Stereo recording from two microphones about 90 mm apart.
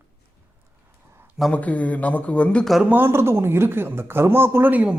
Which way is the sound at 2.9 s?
25° right (ahead or behind).